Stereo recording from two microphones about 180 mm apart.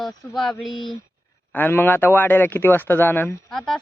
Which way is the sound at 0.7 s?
25° left (ahead or behind).